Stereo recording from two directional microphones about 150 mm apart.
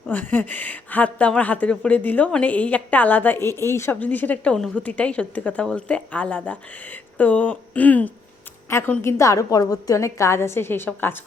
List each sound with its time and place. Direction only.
0.1 s speech: 10° left (ahead or behind)